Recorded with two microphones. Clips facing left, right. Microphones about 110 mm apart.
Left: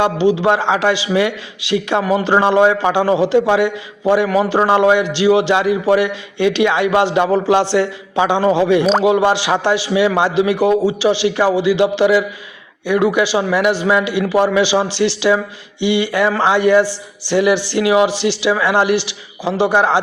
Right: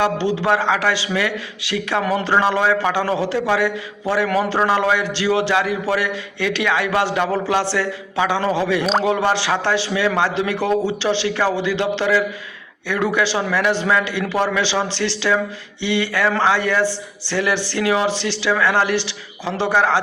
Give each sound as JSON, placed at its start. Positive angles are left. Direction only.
{"t": 0.0, "sound": "a man's voice", "side_deg": 20}
{"t": 8.8, "sound": "speech", "side_deg": 0}
{"t": 9.0, "sound": "speech", "side_deg": 15}